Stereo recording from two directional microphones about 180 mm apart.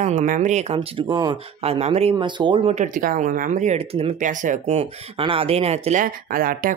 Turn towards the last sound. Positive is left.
turn(degrees=-50)  # may be behind; listen again after turning